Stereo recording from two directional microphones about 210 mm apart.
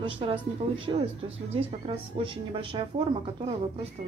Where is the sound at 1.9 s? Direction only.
25° right (ahead or behind).